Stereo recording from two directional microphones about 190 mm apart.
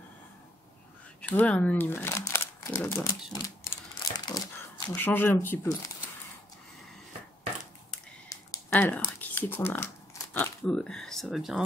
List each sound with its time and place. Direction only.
1.2 s speech: 5° left (ahead or behind)
3.4 s crumpling: 20° left (ahead or behind)
4.9 s speech: 10° left (ahead or behind)
8.3 s a sound: 15° left (ahead or behind)
10.3 s speech: 5° left (ahead or behind)